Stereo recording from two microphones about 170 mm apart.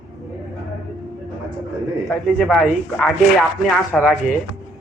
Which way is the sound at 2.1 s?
Centre (ahead or behind).